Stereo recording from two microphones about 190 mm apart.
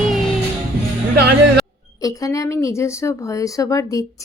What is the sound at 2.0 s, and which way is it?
Speech, 20° left (ahead or behind).